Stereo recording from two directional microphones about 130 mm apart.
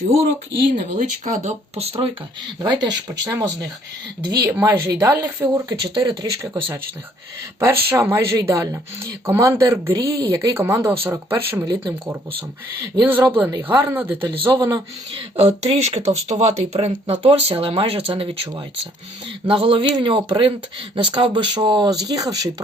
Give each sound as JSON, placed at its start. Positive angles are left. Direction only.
{"t": 0.9, "sound": "speech", "side_deg": -70}
{"t": 2.6, "sound": "speech", "side_deg": -35}
{"t": 13.0, "sound": "speech", "side_deg": -15}
{"t": 14.3, "sound": "speech", "side_deg": -35}
{"t": 15.1, "sound": "speech", "side_deg": -50}